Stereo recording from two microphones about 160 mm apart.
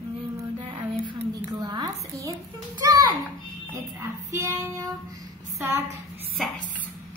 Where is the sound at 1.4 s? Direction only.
25° right (ahead or behind).